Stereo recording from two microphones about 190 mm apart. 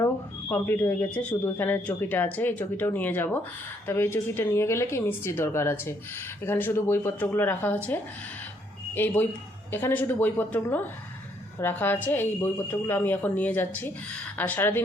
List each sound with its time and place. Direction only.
0.0 s speech: 10° left (ahead or behind)